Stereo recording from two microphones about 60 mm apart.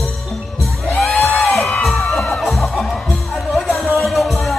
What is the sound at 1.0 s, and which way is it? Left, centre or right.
Music, centre.